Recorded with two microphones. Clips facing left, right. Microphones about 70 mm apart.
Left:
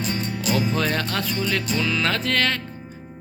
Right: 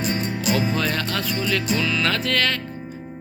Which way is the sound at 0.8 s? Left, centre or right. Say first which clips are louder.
Even; left.